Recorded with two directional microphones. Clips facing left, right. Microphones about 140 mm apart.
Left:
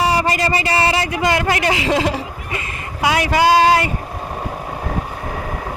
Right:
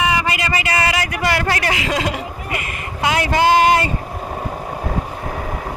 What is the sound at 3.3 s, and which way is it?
Speech, 20° right (ahead or behind).